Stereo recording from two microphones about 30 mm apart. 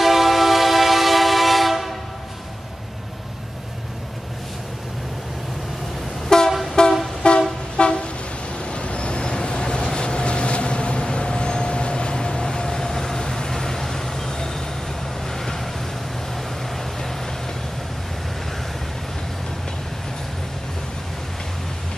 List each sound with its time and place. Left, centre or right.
0.0 s train: centre
6.2 s train: centre
6.8 s vehicle: left
7.2 s toot: left
7.7 s vehicle: left; by 15.7 s centre
16.7 s vehicle: centre